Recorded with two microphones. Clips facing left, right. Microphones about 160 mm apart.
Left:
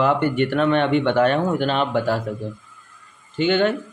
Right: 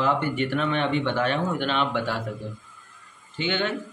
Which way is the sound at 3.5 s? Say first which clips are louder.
Left 8 dB; 50° left (ahead or behind).